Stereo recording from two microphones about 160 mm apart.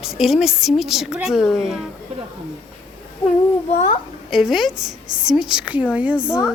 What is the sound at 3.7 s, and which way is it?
Speech, 45° left (ahead or behind).